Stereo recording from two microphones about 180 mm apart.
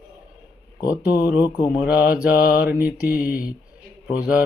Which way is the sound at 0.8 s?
20° left (ahead or behind).